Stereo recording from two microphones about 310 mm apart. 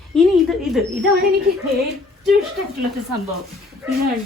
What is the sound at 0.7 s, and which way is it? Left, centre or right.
Speech, centre.